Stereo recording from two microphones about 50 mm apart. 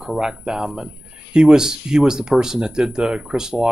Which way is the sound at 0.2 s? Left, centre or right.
Centre.